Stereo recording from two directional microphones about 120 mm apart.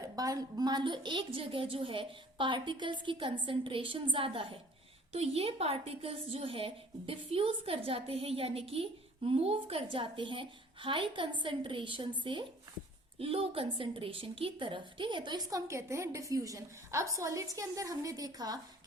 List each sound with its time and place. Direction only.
0.0 s a woman's voice: 30° right (ahead or behind)
13.1 s a woman's voice: 55° right (ahead or behind); by 18.6 s 30° right (ahead or behind)